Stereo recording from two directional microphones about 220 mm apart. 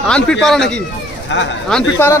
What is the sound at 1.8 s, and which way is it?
Speech, 15° left (ahead or behind).